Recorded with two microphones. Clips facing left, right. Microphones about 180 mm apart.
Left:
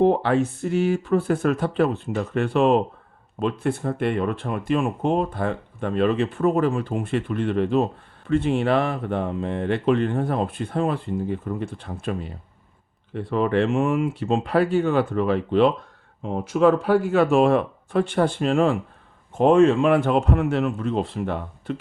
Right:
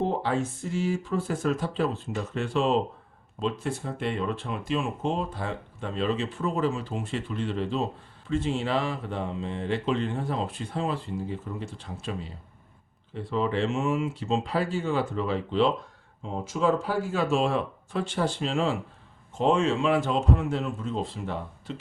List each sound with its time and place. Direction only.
0.0 s speech: 65° left (ahead or behind)